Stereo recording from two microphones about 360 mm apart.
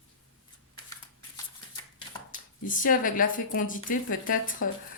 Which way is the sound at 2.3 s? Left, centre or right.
Left.